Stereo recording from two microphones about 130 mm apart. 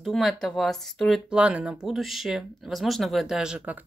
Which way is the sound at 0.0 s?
Centre (ahead or behind).